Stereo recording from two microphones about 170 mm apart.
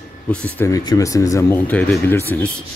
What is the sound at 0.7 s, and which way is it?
Speech, 20° left (ahead or behind).